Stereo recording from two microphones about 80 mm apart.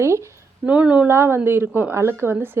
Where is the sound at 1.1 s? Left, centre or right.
Right.